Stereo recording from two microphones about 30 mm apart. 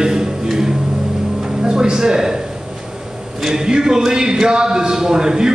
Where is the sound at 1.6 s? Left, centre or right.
Right.